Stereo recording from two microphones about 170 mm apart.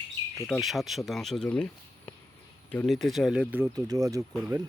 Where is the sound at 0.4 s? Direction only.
Centre (ahead or behind).